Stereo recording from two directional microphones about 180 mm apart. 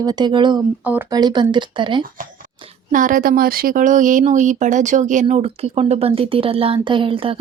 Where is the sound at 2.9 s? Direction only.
50° right (ahead or behind).